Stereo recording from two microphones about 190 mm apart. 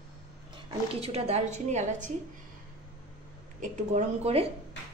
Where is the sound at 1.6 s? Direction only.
40° right (ahead or behind).